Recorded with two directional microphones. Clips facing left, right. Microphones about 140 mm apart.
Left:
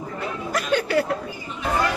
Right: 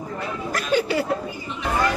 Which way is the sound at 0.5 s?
5° right (ahead or behind).